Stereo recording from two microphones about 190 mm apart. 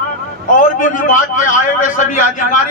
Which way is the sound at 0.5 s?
45° left (ahead or behind).